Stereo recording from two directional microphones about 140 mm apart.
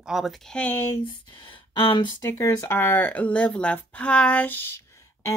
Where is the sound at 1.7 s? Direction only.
35° left (ahead or behind).